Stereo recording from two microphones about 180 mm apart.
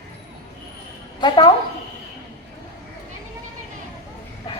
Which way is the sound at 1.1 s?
25° left (ahead or behind).